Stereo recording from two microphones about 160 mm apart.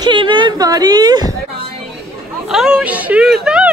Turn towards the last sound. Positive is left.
turn(degrees=-5)  # may be behind; listen again after turning